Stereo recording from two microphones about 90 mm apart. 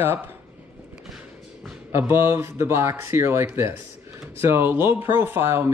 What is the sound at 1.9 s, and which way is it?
Speech, 25° right (ahead or behind).